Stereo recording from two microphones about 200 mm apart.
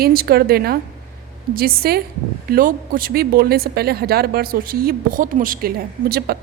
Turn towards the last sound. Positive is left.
turn(degrees=-50)  # may be behind; listen again after turning